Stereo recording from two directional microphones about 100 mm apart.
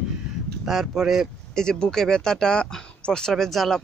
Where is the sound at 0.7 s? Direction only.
Centre (ahead or behind).